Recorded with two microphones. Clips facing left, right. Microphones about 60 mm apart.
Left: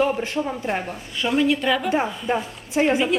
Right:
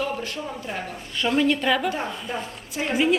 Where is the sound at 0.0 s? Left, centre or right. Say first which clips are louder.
Left 7 dB; left.